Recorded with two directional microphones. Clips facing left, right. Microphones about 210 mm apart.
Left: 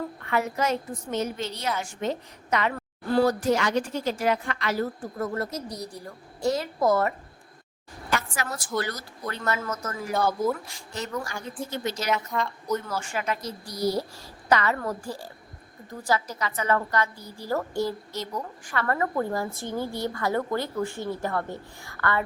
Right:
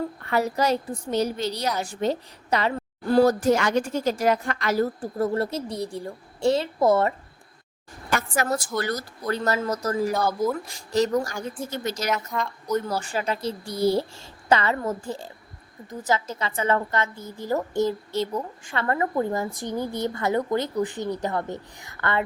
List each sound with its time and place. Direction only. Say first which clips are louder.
0.2 s a woman's voice: right 3 dB; 35° right (ahead or behind)
8.1 s a sound: right 5 dB; 45° right (ahead or behind)
8.8 s a woman's voice: right 3 dB; 45° right (ahead or behind)
12.0 s a woman's voice: even; centre (ahead or behind)
12.9 s a woman's voice: right 3 dB; 35° right (ahead or behind)